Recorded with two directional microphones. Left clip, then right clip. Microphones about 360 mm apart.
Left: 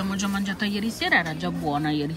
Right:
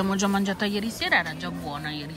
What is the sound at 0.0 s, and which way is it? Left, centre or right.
Speech, centre.